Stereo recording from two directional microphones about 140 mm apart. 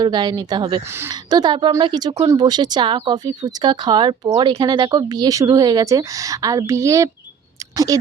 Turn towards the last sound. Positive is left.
turn(degrees=-25)  # may be behind; listen again after turning